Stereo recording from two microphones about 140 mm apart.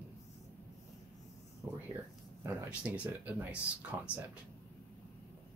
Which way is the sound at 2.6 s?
10° right (ahead or behind).